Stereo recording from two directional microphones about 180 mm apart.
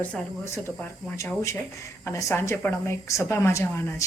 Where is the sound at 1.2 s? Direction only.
15° left (ahead or behind).